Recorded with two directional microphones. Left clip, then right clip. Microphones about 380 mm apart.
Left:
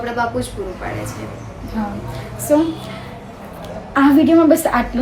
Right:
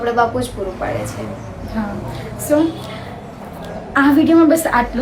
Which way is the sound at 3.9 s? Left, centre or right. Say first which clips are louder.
Even; centre.